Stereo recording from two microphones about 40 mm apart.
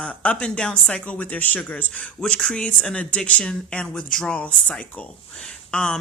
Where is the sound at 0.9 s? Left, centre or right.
Left.